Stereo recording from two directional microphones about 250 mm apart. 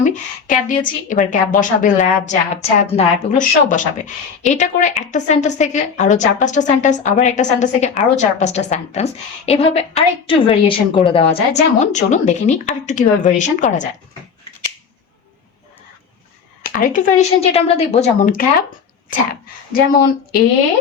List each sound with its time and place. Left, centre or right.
0.0 s a woman's voice: left
16.7 s a woman's voice: left